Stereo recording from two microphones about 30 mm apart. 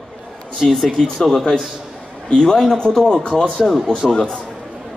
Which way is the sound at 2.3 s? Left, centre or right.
Left.